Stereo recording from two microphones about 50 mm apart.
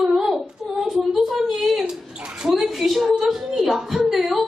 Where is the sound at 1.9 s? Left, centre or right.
Centre.